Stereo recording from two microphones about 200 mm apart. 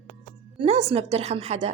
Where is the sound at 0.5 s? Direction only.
30° right (ahead or behind).